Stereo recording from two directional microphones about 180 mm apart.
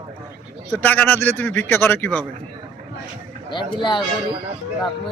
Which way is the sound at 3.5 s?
25° left (ahead or behind).